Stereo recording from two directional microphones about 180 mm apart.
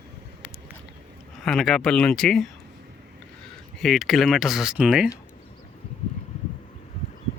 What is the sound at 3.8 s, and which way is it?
Speech, centre (ahead or behind).